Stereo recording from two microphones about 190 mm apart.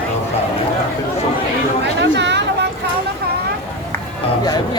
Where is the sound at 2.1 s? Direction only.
65° right (ahead or behind).